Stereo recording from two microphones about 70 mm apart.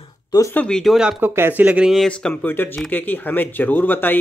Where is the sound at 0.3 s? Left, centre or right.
Left.